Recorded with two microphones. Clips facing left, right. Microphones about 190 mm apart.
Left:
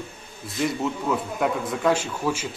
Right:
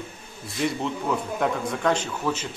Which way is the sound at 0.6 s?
Centre (ahead or behind).